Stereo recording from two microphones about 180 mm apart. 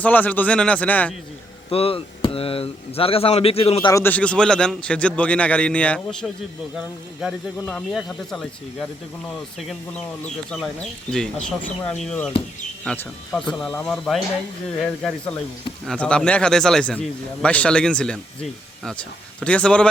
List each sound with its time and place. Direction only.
0.0 s a man's voice: 10° left (ahead or behind)
1.7 s speech: 30° left (ahead or behind)
3.8 s a man's voice: 15° left (ahead or behind)
19.4 s a man's voice: 5° left (ahead or behind)